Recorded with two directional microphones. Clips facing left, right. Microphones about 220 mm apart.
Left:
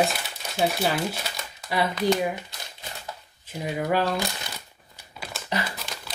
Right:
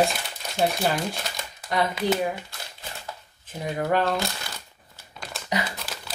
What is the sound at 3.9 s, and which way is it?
Speech, 10° left (ahead or behind).